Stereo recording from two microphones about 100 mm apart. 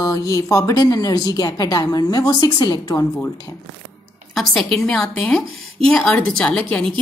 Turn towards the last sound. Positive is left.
turn(degrees=15)  # may be behind; listen again after turning